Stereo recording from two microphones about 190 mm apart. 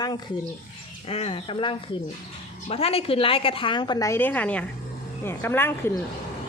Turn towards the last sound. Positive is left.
turn(degrees=10)  # may be behind; listen again after turning